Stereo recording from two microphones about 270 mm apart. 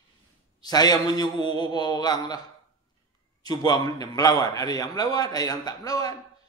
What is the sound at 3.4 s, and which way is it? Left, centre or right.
A man's voice, centre.